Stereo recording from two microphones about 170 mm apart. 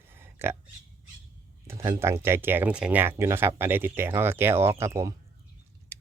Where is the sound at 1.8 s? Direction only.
15° right (ahead or behind).